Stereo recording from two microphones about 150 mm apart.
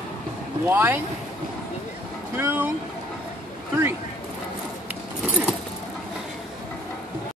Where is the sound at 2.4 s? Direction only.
15° right (ahead or behind).